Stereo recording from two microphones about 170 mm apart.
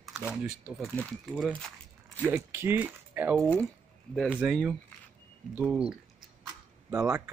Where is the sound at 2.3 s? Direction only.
15° right (ahead or behind).